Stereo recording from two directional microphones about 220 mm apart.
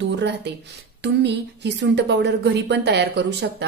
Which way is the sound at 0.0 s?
50° right (ahead or behind).